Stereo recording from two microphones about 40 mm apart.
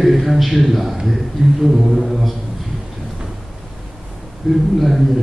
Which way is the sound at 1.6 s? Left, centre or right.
Centre.